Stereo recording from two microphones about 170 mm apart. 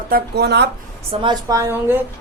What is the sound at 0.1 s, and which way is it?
Speech, 75° right (ahead or behind).